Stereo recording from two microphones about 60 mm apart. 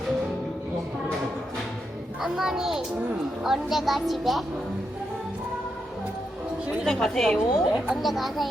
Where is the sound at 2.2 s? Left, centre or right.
Centre.